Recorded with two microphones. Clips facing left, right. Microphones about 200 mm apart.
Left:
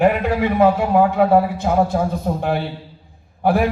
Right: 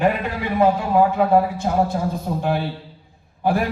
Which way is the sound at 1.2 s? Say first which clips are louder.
Left 2 dB; 60° left (ahead or behind).